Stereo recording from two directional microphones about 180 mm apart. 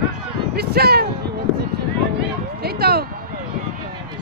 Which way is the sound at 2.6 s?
60° right (ahead or behind).